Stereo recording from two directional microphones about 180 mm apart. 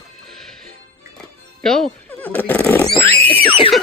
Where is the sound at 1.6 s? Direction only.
5° left (ahead or behind).